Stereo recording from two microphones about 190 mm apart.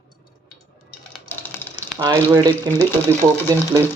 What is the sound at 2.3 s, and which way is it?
Speech, 20° right (ahead or behind).